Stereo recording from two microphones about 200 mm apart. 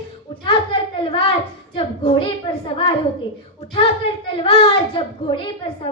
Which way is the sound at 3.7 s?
25° left (ahead or behind).